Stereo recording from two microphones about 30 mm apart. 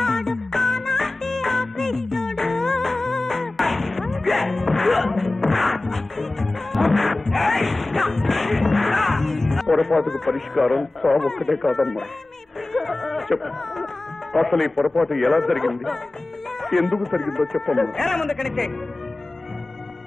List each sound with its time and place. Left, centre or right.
0.0 s music: centre
10.5 s a man's voice: centre
12.7 s a sound: centre
14.3 s a man's voice: centre